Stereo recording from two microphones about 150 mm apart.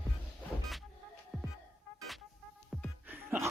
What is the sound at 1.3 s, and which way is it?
Music, centre (ahead or behind).